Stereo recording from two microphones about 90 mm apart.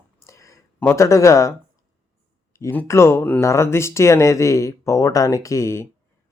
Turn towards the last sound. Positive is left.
turn(degrees=30)  # may be behind; listen again after turning